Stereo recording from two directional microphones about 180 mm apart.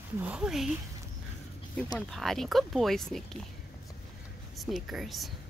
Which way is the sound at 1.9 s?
Centre (ahead or behind).